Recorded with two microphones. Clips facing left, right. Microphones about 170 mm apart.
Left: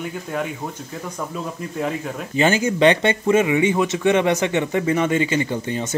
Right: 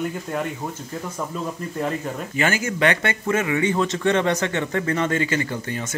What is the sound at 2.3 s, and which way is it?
Speech, 20° left (ahead or behind).